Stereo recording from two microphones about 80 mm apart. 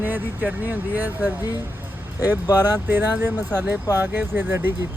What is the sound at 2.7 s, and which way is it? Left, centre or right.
Speech, right.